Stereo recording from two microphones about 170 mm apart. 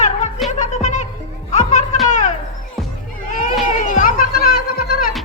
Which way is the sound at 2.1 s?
45° left (ahead or behind).